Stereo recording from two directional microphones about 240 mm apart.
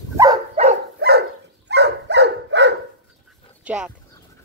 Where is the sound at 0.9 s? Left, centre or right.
Right.